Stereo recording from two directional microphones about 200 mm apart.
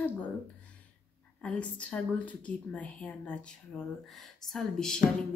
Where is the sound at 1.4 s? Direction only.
5° left (ahead or behind).